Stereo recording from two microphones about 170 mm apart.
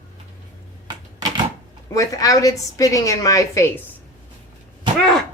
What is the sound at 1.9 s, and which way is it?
A woman's voice, 20° left (ahead or behind).